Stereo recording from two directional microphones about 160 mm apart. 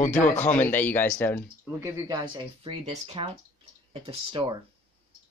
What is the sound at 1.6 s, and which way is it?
Speech, 20° right (ahead or behind).